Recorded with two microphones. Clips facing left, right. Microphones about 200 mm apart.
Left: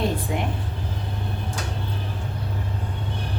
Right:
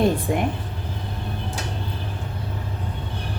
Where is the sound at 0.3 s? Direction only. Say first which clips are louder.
Right 4 dB; 50° right (ahead or behind).